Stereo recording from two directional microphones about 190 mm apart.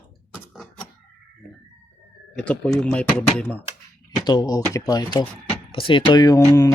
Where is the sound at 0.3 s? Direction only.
Centre (ahead or behind).